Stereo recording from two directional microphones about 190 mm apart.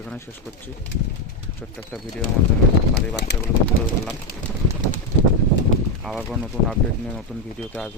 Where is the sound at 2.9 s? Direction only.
60° left (ahead or behind).